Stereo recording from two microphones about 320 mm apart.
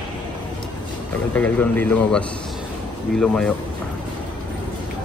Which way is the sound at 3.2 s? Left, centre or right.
Centre.